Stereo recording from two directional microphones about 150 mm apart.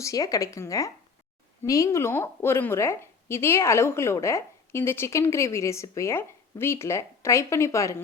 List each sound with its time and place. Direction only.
0.0 s a woman's voice: 20° left (ahead or behind)